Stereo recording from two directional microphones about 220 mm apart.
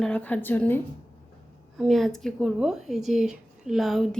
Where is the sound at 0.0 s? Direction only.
5° left (ahead or behind).